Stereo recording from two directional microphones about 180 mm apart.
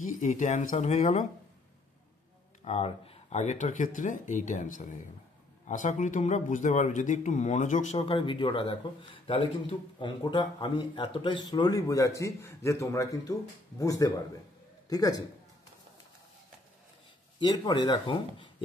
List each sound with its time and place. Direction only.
0.2 s speech: 45° left (ahead or behind)
2.6 s a man's voice: 35° left (ahead or behind); by 15.2 s 20° left (ahead or behind)
17.4 s a man's voice: 25° left (ahead or behind)